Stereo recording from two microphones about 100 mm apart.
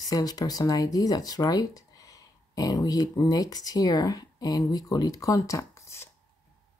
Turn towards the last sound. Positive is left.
turn(degrees=25)  # may be behind; listen again after turning